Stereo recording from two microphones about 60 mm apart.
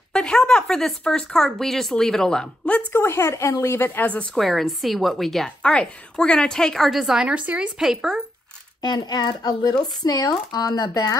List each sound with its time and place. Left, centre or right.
0.1 s speech: centre
2.9 s a woman's voice: left
3.7 s speech: left
4.4 s a woman's voice: centre
5.6 s speech: centre
7.2 s speech: right
7.8 s speech: centre
8.9 s speech: left